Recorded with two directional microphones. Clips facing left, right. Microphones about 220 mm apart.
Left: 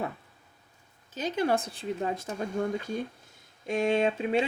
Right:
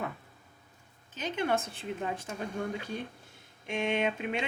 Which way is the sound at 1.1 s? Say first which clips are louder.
Left 3 dB; 35° left (ahead or behind).